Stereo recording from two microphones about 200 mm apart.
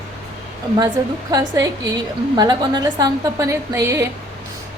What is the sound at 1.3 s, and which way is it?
A woman's voice, 20° right (ahead or behind).